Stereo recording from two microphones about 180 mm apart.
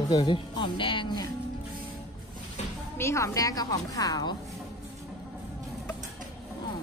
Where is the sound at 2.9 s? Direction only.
15° left (ahead or behind).